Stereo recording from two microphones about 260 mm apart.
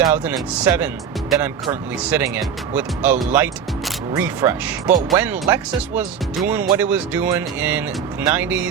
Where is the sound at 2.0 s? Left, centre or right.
Centre.